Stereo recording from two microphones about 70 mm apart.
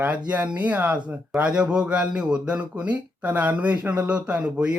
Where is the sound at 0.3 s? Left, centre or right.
Right.